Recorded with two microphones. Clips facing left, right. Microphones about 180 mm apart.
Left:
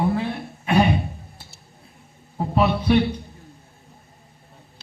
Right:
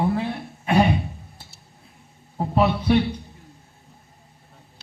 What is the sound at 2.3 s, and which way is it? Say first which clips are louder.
Speech: even; 20° right (ahead or behind).